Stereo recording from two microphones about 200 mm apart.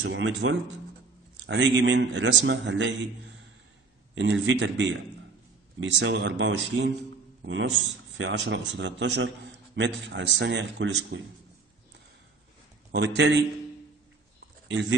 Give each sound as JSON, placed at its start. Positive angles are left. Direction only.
{"t": 0.0, "sound": "speech", "side_deg": -70}
{"t": 1.4, "sound": "a man's voice", "side_deg": -60}
{"t": 4.2, "sound": "a man's voice", "side_deg": -65}
{"t": 12.9, "sound": "a man's voice", "side_deg": -60}
{"t": 14.7, "sound": "speech", "side_deg": -65}